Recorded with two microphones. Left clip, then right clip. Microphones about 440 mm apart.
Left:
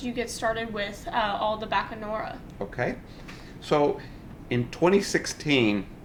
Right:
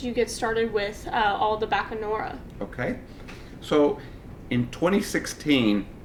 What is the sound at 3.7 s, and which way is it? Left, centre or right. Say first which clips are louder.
Speech: right 2 dB; left.